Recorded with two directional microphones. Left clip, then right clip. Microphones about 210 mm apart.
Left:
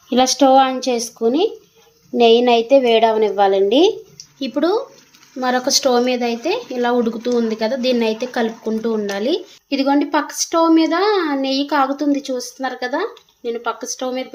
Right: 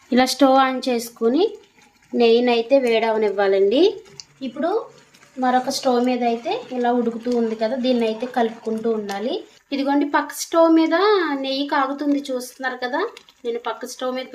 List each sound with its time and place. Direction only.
0.1 s a woman's voice: centre (ahead or behind)
4.4 s speech: 50° left (ahead or behind)
9.6 s a child's voice: 20° left (ahead or behind)